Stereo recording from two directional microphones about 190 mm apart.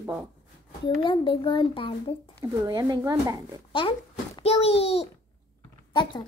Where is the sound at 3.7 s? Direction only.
25° left (ahead or behind).